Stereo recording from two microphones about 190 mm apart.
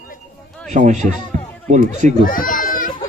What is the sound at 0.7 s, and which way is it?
Speech, 40° right (ahead or behind).